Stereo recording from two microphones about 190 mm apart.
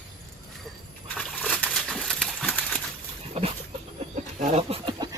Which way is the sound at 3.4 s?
30° right (ahead or behind).